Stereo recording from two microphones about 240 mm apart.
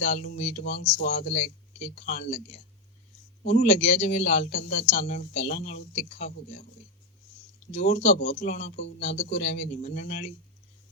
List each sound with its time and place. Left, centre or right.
0.0 s speech: left
7.7 s speech: left